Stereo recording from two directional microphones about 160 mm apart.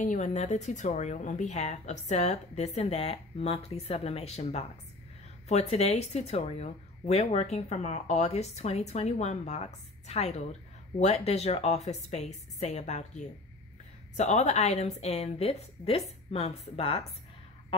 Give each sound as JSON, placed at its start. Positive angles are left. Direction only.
{"t": 0.0, "sound": "a woman's voice", "side_deg": 50}